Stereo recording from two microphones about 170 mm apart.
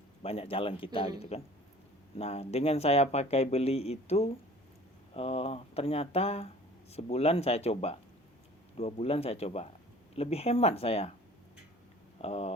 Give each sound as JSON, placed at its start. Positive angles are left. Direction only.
{"t": 0.2, "sound": "speech", "side_deg": 35}
{"t": 12.2, "sound": "speech", "side_deg": 40}